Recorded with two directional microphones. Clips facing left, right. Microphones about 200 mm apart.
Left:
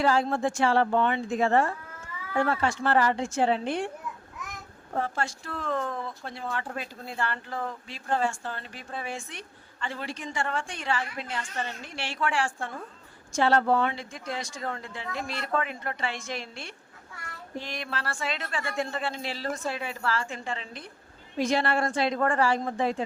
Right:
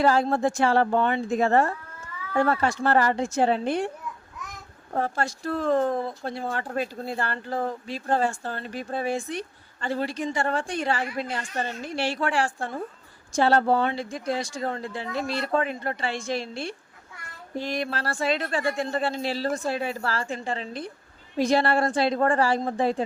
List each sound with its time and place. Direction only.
0.0 s speech: 40° right (ahead or behind)
4.9 s speech: 40° right (ahead or behind)